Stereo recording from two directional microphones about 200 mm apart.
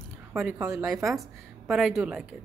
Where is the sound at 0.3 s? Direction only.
10° right (ahead or behind).